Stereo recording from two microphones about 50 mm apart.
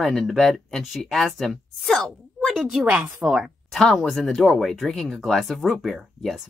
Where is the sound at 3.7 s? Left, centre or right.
Centre.